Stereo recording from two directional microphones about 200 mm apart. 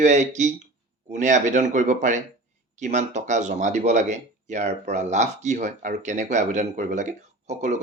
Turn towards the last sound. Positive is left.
turn(degrees=-35)  # may be behind; listen again after turning